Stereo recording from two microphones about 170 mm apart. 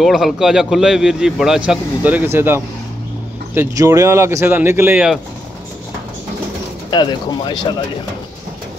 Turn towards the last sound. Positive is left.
turn(degrees=25)  # may be behind; listen again after turning